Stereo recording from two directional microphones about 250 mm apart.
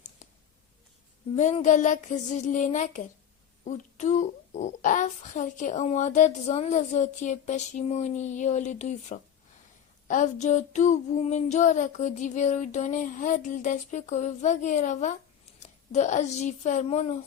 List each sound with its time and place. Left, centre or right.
1.4 s a child's voice: left